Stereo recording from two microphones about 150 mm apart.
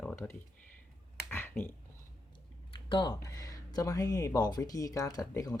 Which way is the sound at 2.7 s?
30° left (ahead or behind).